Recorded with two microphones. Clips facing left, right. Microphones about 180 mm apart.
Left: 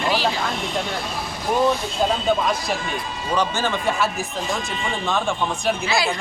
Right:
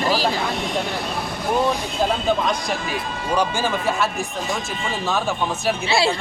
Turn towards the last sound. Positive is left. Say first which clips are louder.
# right 3 dB
turn(degrees=-30)  # may be behind; listen again after turning